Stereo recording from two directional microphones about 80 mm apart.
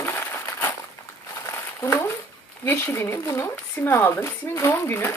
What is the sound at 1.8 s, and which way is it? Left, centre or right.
Speech, left.